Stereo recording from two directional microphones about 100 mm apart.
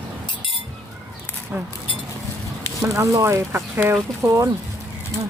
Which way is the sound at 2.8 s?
30° right (ahead or behind).